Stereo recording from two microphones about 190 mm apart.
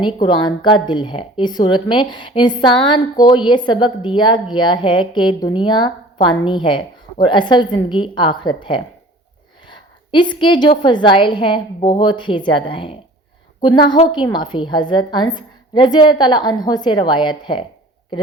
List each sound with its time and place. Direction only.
0.0 s a woman's voice: 25° left (ahead or behind)
9.6 s a sound: 25° left (ahead or behind)
10.8 s a woman's voice: 25° left (ahead or behind)